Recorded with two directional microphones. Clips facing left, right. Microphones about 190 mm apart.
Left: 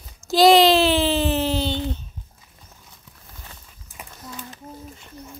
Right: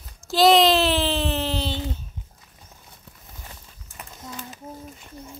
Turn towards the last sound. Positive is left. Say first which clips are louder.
# left 1 dB
turn(degrees=5)  # may be behind; listen again after turning